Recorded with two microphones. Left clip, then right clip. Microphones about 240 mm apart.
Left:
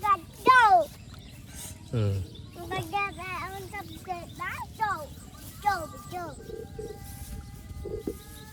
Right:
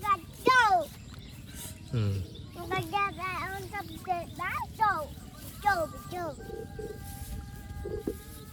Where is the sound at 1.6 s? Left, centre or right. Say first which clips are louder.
Left 4 dB; centre.